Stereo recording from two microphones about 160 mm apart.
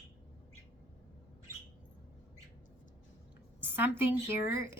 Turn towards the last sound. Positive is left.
turn(degrees=-15)  # may be behind; listen again after turning